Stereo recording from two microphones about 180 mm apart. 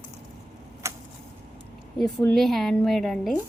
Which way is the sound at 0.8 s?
15° right (ahead or behind).